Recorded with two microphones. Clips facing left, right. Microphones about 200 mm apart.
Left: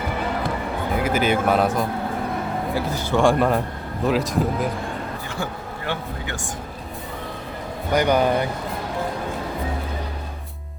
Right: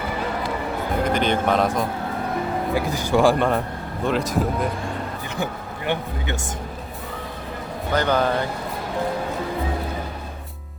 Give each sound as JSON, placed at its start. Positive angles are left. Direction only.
{"t": 0.9, "sound": "speech", "side_deg": 5}
{"t": 2.7, "sound": "speech", "side_deg": -15}
{"t": 3.2, "sound": "speech", "side_deg": 0}
{"t": 5.3, "sound": "speech", "side_deg": -20}
{"t": 7.9, "sound": "speech", "side_deg": 15}